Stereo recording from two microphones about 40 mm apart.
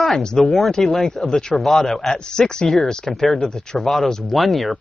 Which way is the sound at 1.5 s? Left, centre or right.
Centre.